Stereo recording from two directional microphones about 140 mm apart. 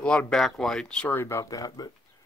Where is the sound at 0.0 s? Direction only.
5° left (ahead or behind).